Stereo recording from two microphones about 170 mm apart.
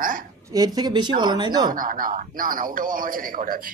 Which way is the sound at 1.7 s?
55° right (ahead or behind).